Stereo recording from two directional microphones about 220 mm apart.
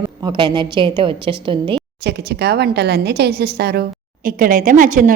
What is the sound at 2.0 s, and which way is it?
A woman's voice, 50° right (ahead or behind).